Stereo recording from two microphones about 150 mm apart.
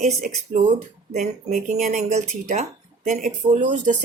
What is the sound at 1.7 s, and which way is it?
Speech, 60° right (ahead or behind).